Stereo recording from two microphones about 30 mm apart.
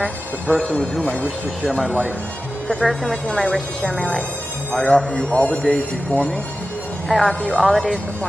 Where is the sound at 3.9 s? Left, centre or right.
Left.